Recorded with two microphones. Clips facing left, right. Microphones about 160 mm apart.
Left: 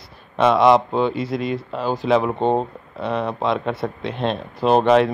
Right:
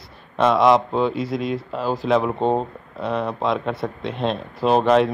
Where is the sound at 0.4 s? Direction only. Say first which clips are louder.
Left 1 dB; centre (ahead or behind).